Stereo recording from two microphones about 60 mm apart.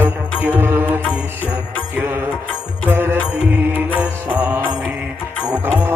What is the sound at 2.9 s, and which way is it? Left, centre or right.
Music, right.